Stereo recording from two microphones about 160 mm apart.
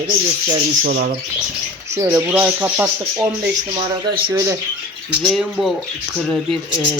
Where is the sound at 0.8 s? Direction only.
65° right (ahead or behind).